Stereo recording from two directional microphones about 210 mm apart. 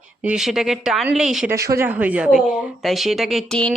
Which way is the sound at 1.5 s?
15° right (ahead or behind).